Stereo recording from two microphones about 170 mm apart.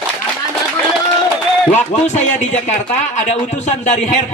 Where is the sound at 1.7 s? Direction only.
40° left (ahead or behind).